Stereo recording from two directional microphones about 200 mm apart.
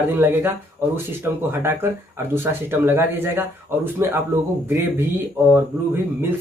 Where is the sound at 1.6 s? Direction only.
10° right (ahead or behind).